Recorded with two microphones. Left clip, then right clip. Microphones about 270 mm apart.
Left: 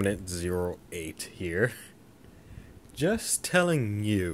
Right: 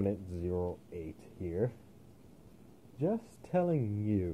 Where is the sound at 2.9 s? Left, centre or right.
Left.